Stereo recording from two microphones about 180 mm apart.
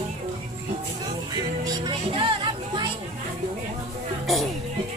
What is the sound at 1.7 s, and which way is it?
Speech, 25° right (ahead or behind).